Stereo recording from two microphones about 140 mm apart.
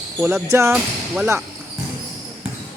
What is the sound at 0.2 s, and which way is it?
Speech, 15° right (ahead or behind).